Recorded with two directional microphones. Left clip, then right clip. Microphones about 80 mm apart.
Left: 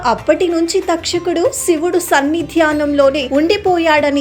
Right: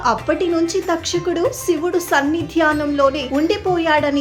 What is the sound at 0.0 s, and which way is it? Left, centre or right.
A woman's voice, left.